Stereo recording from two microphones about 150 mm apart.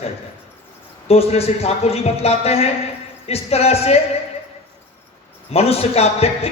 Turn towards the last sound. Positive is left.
turn(degrees=40)  # may be behind; listen again after turning